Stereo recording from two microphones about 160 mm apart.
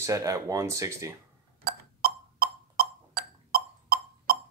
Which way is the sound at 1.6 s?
70° right (ahead or behind).